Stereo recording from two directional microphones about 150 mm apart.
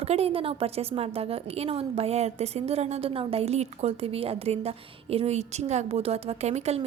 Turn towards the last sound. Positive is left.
turn(degrees=-45)  # may be behind; listen again after turning